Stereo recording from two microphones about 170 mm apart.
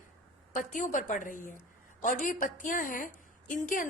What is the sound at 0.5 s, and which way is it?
A woman's voice, 50° left (ahead or behind).